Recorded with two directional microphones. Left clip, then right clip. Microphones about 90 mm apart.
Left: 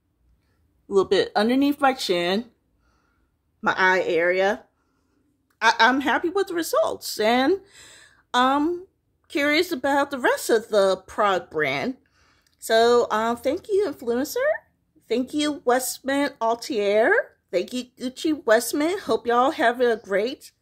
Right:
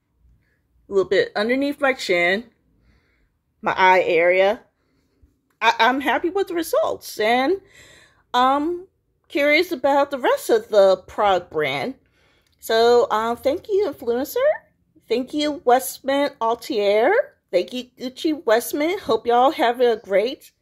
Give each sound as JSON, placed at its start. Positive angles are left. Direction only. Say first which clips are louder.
{"t": 0.8, "sound": "speech", "louder": "right 1 dB", "side_deg": 60}
{"t": 3.6, "sound": "speech", "louder": "right 4 dB", "side_deg": 35}
{"t": 5.6, "sound": "speech", "louder": "right 1 dB", "side_deg": 25}
{"t": 7.4, "sound": "a sound", "louder": "right 1 dB", "side_deg": 40}
{"t": 8.5, "sound": "speech", "louder": "right 1 dB", "side_deg": 50}
{"t": 9.3, "sound": "speech", "louder": "right 4 dB", "side_deg": 35}